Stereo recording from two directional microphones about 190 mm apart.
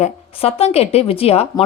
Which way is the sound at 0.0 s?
30° left (ahead or behind).